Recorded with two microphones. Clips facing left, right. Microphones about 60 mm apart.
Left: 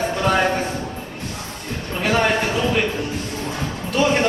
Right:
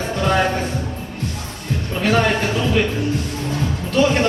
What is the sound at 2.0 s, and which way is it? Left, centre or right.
Music, centre.